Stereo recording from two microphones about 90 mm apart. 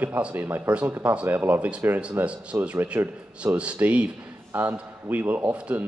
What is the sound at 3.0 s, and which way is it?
Speech, 35° right (ahead or behind).